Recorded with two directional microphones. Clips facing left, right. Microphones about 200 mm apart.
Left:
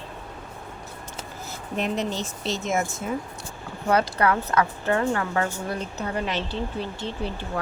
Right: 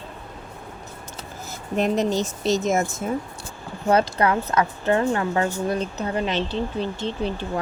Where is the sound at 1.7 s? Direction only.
45° right (ahead or behind).